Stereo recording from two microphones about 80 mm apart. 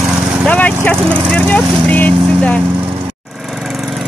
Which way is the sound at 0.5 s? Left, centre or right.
Centre.